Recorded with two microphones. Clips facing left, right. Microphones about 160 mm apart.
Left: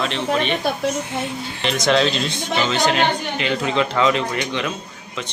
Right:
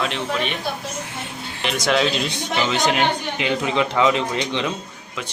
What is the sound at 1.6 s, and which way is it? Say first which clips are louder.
Speech: left 2 dB; 5° right (ahead or behind).